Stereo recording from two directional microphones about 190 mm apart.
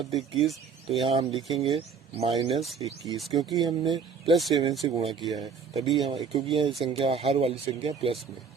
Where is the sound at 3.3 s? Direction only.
20° right (ahead or behind).